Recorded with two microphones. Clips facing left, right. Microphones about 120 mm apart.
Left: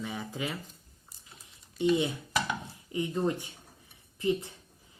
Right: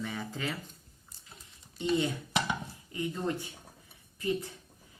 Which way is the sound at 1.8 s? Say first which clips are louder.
Left 3 dB; 15° left (ahead or behind).